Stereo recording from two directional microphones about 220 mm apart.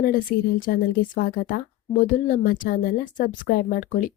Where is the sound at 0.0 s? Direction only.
40° left (ahead or behind).